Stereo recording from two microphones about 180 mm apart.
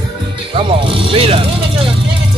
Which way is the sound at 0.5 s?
30° right (ahead or behind).